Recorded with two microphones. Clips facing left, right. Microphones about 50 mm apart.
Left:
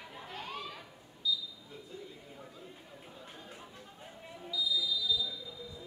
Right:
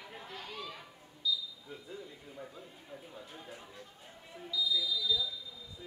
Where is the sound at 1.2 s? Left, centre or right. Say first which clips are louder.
Even; centre.